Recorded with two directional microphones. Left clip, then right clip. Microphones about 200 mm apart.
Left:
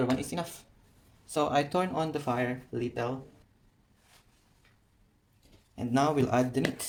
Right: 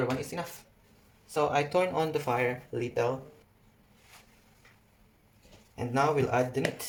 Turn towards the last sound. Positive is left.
turn(degrees=35)  # may be behind; listen again after turning